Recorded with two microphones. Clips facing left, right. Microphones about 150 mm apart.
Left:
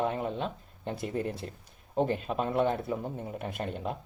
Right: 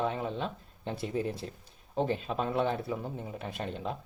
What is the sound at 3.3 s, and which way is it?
Speech, 50° left (ahead or behind).